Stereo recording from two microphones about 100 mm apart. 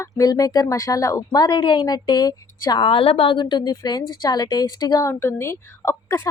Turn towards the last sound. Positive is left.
turn(degrees=25)  # may be behind; listen again after turning